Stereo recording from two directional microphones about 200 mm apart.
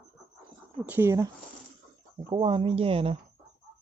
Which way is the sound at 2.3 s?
25° right (ahead or behind).